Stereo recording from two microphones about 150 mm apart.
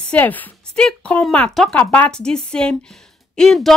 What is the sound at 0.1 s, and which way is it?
Speech, 10° left (ahead or behind).